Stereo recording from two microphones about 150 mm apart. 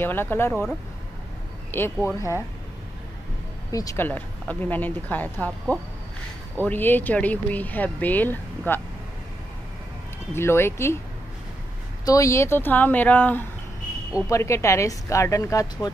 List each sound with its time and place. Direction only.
0.0 s speech: 15° left (ahead or behind)
1.7 s a woman's voice: 15° left (ahead or behind)
3.7 s speech: 20° left (ahead or behind)
10.3 s speech: 15° left (ahead or behind)
12.0 s a woman's voice: 20° left (ahead or behind)